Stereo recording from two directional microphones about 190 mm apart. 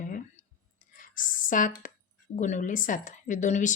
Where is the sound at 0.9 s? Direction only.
45° left (ahead or behind).